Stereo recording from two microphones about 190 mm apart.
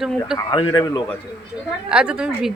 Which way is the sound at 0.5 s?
25° left (ahead or behind).